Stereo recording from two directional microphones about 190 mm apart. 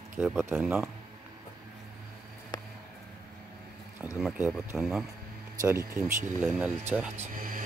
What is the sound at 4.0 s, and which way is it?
Speech, 5° right (ahead or behind).